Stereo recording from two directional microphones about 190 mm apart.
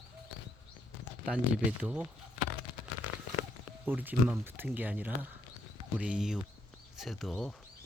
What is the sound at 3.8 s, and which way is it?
Speech, 10° right (ahead or behind).